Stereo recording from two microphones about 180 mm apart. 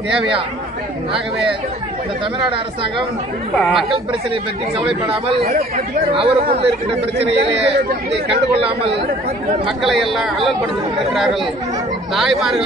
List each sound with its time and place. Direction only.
2.5 s speech: 30° right (ahead or behind)
3.5 s a man's voice: centre (ahead or behind)
6.1 s speech: 30° right (ahead or behind)
9.8 s a man's voice: centre (ahead or behind)
12.1 s a man's voice: centre (ahead or behind)